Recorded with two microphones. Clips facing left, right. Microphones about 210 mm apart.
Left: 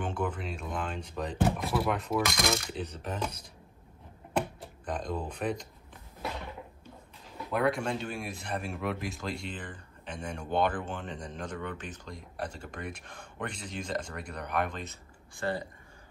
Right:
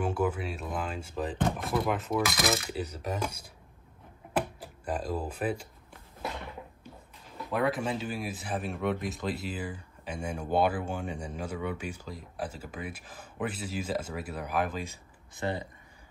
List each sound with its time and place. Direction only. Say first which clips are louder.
0.0 s speech: right 4 dB; 5° right (ahead or behind)
4.4 s a sound: even; 5° right (ahead or behind)
7.5 s speech: even; centre (ahead or behind)
15.3 s speech: even; 20° right (ahead or behind)